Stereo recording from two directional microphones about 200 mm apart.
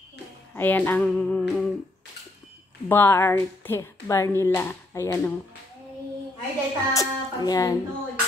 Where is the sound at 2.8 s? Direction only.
10° left (ahead or behind).